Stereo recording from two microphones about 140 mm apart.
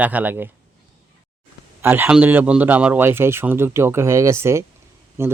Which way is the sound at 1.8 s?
15° right (ahead or behind).